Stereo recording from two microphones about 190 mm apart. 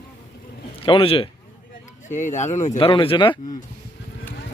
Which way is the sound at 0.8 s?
30° left (ahead or behind).